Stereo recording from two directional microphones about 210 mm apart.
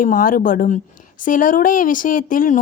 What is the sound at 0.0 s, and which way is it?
A woman's voice, 40° left (ahead or behind).